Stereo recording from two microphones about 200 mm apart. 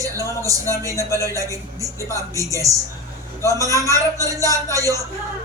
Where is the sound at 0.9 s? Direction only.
15° left (ahead or behind).